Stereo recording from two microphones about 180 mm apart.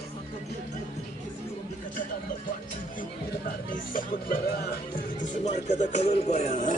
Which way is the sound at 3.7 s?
50° left (ahead or behind).